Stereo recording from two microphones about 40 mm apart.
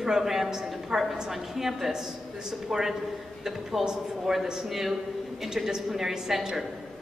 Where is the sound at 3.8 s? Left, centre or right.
Centre.